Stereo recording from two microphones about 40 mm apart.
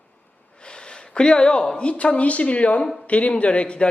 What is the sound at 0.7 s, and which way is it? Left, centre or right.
Speech, left.